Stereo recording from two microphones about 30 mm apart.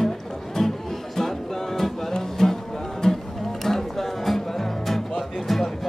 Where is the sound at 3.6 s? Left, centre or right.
Centre.